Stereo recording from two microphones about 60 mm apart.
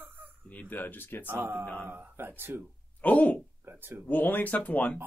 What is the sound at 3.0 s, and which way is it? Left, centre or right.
Speech, left.